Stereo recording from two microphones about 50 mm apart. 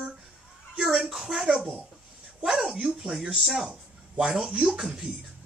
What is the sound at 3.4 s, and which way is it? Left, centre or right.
Speech, centre.